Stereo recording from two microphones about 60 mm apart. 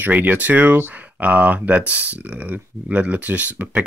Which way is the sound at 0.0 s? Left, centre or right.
Right.